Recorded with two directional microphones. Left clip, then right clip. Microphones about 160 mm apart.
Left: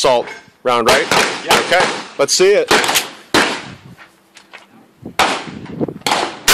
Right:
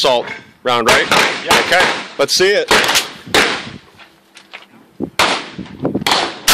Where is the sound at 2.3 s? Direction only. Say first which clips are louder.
Left 2 dB; 25° left (ahead or behind).